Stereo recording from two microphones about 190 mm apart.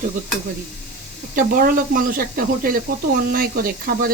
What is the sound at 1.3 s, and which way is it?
Speech, 50° right (ahead or behind).